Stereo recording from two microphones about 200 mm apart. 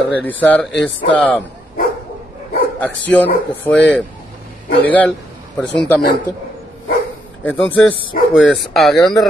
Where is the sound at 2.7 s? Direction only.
10° left (ahead or behind).